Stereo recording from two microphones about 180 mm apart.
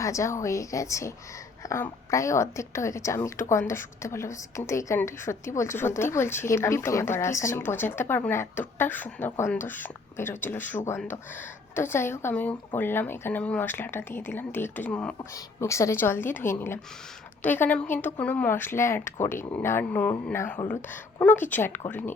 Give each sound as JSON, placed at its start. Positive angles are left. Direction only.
{"t": 0.0, "sound": "a woman's voice", "side_deg": 15}
{"t": 15.2, "sound": "a woman's voice", "side_deg": 15}